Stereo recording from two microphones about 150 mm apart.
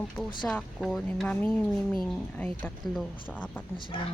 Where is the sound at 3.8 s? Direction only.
30° left (ahead or behind).